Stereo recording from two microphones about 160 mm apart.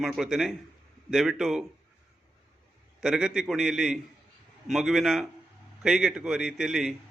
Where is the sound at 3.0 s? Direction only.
5° right (ahead or behind).